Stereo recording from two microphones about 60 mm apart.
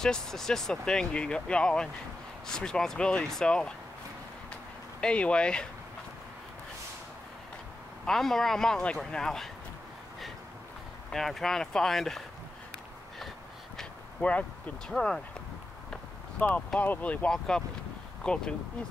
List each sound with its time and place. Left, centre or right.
0.0 s speech: centre
5.0 s speech: centre
8.0 s speech: centre
11.1 s speech: centre
14.9 s speech: centre
16.5 s speech: left
17.3 s speech: centre